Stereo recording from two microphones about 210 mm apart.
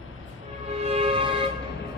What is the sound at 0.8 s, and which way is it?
Music, 30° right (ahead or behind).